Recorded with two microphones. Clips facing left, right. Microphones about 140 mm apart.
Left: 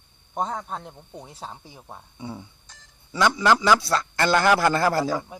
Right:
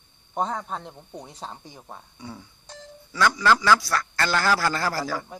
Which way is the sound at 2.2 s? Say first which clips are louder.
Left 7 dB; 25° left (ahead or behind).